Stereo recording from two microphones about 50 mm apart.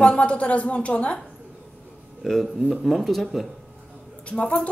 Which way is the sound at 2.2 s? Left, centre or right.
Centre.